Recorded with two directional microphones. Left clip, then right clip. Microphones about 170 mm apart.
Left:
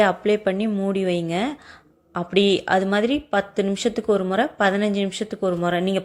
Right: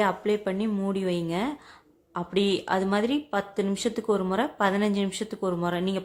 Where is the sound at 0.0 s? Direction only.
15° left (ahead or behind).